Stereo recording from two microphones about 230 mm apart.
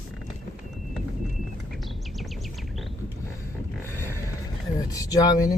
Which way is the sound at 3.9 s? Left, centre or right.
Centre.